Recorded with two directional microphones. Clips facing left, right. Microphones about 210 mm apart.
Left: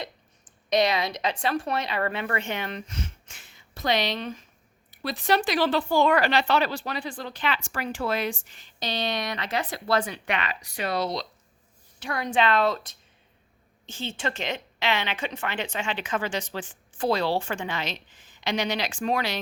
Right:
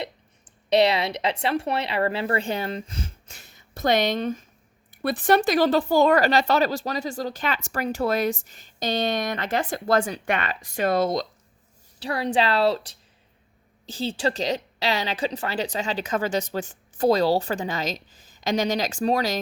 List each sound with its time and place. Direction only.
0.7 s a woman's voice: 25° right (ahead or behind); by 11.3 s 50° right (ahead or behind)
11.9 s a woman's voice: 30° right (ahead or behind)